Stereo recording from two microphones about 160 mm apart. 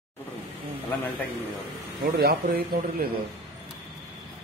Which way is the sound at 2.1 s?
75° right (ahead or behind).